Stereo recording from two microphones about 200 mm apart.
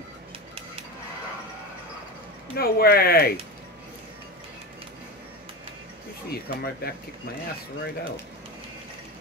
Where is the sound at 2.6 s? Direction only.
50° left (ahead or behind).